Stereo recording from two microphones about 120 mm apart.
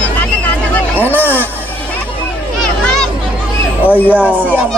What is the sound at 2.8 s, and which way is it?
Children playing, 5° left (ahead or behind).